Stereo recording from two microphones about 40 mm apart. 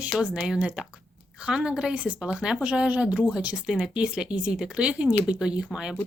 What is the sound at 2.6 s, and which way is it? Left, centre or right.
Speech, right.